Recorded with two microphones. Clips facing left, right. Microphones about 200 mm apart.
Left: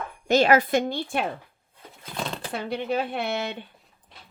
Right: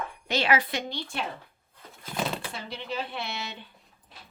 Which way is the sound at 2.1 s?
5° right (ahead or behind).